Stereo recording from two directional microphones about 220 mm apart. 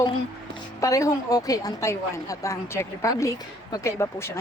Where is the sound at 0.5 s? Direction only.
15° left (ahead or behind).